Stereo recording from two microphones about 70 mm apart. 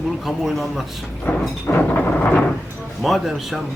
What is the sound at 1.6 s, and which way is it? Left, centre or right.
Thunder, left.